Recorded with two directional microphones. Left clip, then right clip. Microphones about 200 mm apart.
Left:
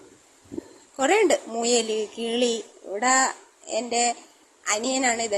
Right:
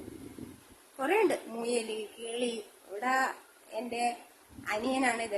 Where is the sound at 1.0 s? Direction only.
30° left (ahead or behind).